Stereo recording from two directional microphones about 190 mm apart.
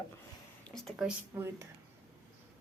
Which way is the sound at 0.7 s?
Centre (ahead or behind).